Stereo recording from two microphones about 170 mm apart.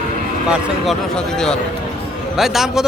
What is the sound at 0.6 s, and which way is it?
Speech, centre (ahead or behind).